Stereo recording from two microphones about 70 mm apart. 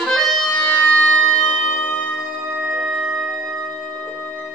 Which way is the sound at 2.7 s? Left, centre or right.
Centre.